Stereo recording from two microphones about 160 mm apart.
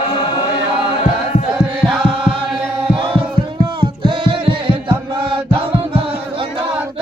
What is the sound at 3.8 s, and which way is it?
Singing, 35° right (ahead or behind).